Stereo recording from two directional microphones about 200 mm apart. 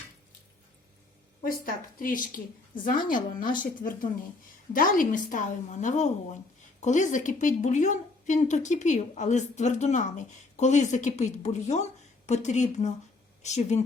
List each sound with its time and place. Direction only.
1.5 s a woman's voice: 45° left (ahead or behind)